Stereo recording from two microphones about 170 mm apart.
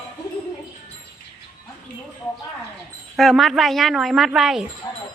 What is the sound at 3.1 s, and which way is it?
A woman's voice, centre (ahead or behind).